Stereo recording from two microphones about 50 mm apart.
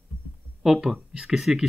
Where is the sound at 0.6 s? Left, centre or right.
Centre.